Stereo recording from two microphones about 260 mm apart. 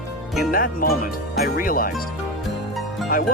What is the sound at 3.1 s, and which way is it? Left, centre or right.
Speech, left.